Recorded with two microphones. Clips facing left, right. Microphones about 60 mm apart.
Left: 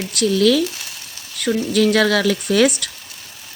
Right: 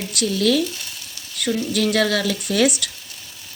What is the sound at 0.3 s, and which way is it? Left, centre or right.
Speech, left.